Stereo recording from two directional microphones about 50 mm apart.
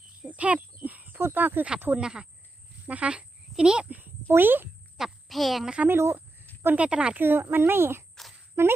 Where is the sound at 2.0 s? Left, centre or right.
Centre.